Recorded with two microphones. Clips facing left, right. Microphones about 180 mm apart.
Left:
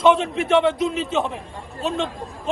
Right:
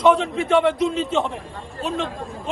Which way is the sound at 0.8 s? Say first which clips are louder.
Right 1 dB; centre (ahead or behind).